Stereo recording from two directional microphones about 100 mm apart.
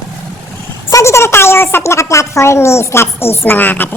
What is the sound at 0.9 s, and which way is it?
A woman's voice, 30° left (ahead or behind).